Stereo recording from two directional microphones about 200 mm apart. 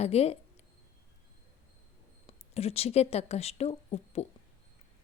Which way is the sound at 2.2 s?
30° left (ahead or behind).